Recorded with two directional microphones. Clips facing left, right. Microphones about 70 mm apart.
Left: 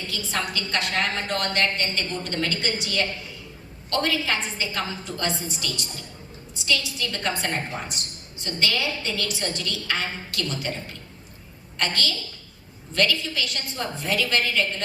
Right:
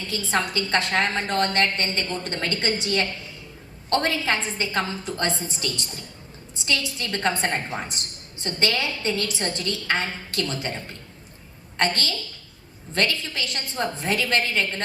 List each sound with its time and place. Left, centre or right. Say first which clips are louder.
0.1 s a woman's voice: right 5 dB; right